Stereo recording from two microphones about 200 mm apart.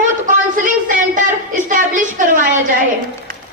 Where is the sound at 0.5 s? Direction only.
40° right (ahead or behind).